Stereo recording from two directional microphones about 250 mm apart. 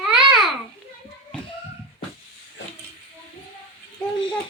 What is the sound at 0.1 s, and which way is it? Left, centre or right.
Babbling, centre.